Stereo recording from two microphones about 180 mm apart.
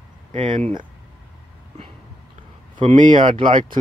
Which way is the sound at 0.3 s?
30° right (ahead or behind).